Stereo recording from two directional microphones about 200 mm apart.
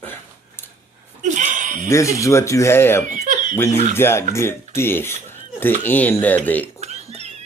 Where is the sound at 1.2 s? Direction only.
40° right (ahead or behind).